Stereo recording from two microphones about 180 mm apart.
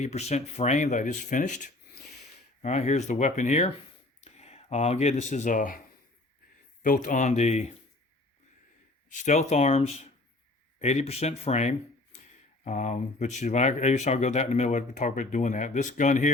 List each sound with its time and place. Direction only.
0.0 s speech: 40° left (ahead or behind)
6.8 s speech: 45° left (ahead or behind)
9.2 s speech: 40° left (ahead or behind)